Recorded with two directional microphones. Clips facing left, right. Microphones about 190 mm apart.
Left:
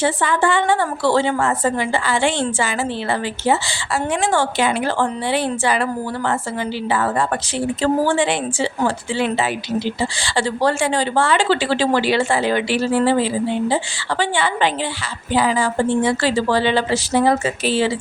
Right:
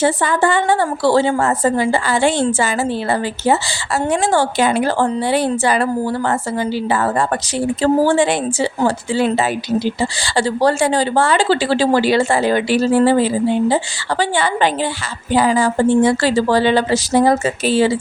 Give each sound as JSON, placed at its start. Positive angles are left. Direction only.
{"t": 0.0, "sound": "a woman's voice", "side_deg": -40}